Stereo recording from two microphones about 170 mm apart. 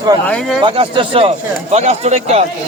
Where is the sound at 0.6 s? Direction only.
30° right (ahead or behind).